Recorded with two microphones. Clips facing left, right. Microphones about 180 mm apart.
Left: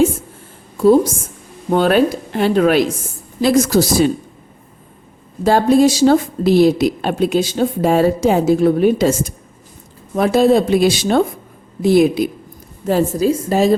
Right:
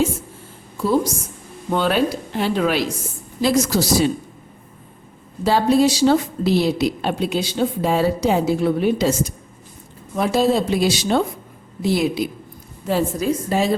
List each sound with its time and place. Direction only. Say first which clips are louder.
0.8 s a woman's voice: left 8 dB; 50° left (ahead or behind)
5.4 s a woman's voice: left 4 dB; 50° left (ahead or behind)
12.9 s a woman's voice: left 5 dB; 40° left (ahead or behind)